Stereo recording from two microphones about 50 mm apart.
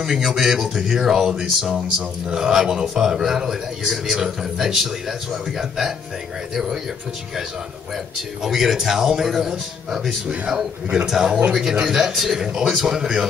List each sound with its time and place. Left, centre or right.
0.0 s speech: centre
8.4 s speech: centre
10.4 s a man's voice: centre